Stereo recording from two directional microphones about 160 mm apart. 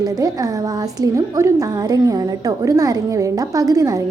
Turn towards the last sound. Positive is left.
turn(degrees=-20)  # may be behind; listen again after turning